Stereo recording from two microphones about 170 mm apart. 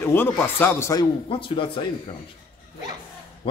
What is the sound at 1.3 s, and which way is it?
Speech, 30° left (ahead or behind).